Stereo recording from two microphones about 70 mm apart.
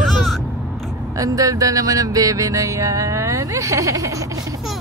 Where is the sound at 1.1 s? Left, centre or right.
Right.